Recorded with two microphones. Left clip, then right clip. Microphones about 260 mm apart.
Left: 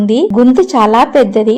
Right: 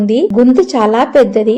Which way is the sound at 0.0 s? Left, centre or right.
Left.